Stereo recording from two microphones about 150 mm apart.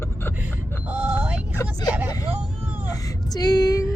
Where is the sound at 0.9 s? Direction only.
10° right (ahead or behind).